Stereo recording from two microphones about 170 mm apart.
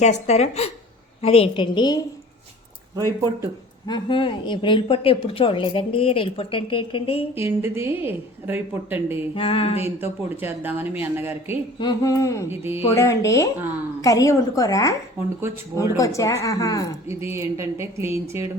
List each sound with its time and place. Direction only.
0.0 s a woman's voice: 40° left (ahead or behind); by 2.0 s 25° left (ahead or behind)
2.9 s speech: 20° right (ahead or behind)
3.8 s a woman's voice: 25° left (ahead or behind)
7.3 s speech: 15° right (ahead or behind)
9.3 s a woman's voice: 30° left (ahead or behind)
10.0 s speech: 10° right (ahead or behind)
11.8 s speech: 25° left (ahead or behind)
12.5 s speech: 15° right (ahead or behind)
12.9 s speech: 15° left (ahead or behind)
17.1 s speech: 15° right (ahead or behind)